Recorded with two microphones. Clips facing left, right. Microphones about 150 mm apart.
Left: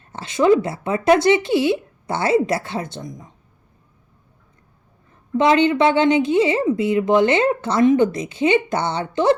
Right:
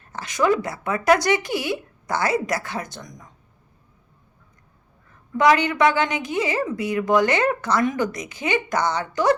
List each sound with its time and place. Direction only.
0.0 s a woman's voice: 25° left (ahead or behind)
5.4 s a woman's voice: 25° left (ahead or behind)